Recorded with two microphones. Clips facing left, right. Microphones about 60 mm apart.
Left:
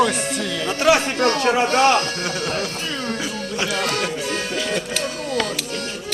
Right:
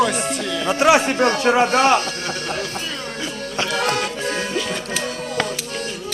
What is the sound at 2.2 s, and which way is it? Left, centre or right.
Speech, centre.